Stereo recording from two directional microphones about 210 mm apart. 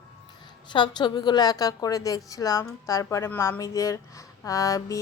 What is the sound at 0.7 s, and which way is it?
A woman's voice, 20° left (ahead or behind).